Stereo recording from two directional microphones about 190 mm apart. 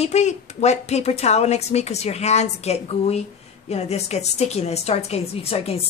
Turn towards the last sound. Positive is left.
turn(degrees=30)  # may be behind; listen again after turning